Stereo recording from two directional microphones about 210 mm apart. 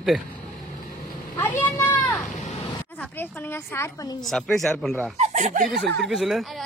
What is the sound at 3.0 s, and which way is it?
A woman's voice, 10° left (ahead or behind).